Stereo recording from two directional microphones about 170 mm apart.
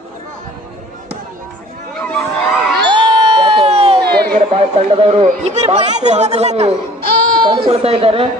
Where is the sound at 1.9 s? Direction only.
Centre (ahead or behind).